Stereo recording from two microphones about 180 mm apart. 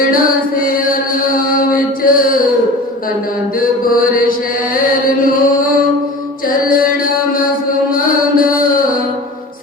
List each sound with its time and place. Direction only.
0.1 s chant: 50° left (ahead or behind)
1.4 s mantra: 50° left (ahead or behind)
3.6 s chant: 50° left (ahead or behind)
7.9 s mantra: 50° left (ahead or behind)